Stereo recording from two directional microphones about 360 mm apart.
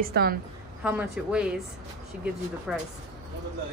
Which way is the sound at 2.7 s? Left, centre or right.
Centre.